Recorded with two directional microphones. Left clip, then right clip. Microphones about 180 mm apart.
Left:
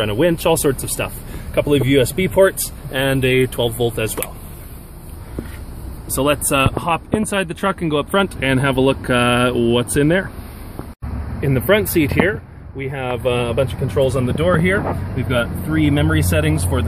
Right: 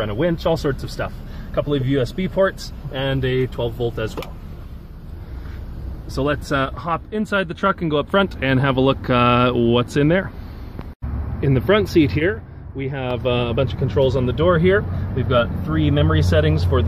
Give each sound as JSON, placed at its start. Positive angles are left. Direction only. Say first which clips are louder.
{"t": 0.0, "sound": "speech", "louder": "left 4 dB", "side_deg": 25}
{"t": 6.1, "sound": "speech", "louder": "left 4 dB", "side_deg": 20}
{"t": 11.4, "sound": "speech", "louder": "left 2 dB", "side_deg": 0}